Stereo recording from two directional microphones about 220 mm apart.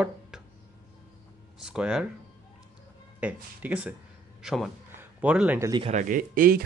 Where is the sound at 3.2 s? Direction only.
5° right (ahead or behind).